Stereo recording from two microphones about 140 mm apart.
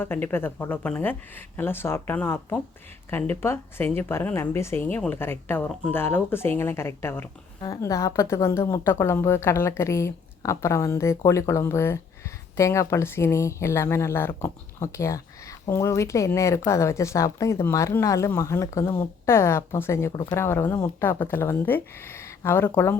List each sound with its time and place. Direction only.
0.0 s speech: 15° left (ahead or behind)